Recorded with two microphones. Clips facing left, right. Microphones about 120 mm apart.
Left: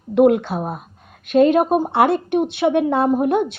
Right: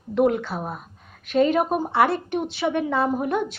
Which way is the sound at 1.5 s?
20° left (ahead or behind).